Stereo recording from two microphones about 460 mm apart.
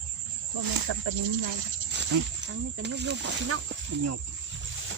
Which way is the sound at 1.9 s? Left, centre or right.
Right.